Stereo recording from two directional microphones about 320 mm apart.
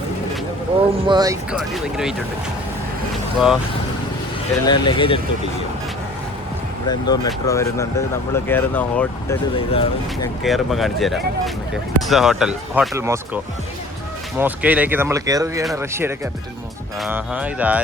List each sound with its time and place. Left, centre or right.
0.8 s speech: centre
3.3 s speech: centre
4.6 s speech: centre
6.8 s speech: centre
9.7 s speech: centre
10.4 s speech: centre